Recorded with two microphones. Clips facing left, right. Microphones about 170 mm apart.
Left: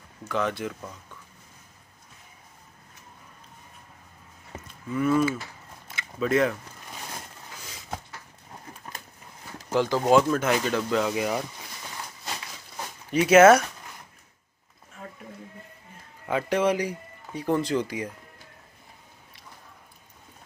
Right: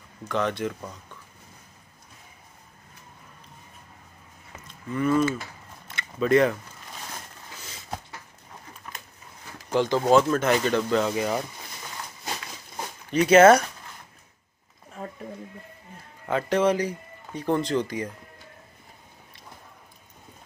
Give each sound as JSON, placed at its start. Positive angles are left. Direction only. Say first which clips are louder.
{"t": 0.3, "sound": "speech", "louder": "right 1 dB", "side_deg": 5}
{"t": 4.9, "sound": "speech", "louder": "even", "side_deg": 5}
{"t": 5.9, "sound": "biting", "louder": "right 4 dB", "side_deg": 5}
{"t": 8.8, "sound": "a sound", "louder": "even", "side_deg": 35}
{"t": 9.7, "sound": "speech", "louder": "right 1 dB", "side_deg": 5}
{"t": 13.1, "sound": "speech", "louder": "even", "side_deg": 5}
{"t": 16.3, "sound": "speech", "louder": "right 1 dB", "side_deg": 10}